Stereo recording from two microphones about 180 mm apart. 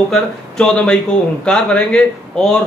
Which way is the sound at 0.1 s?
5° left (ahead or behind).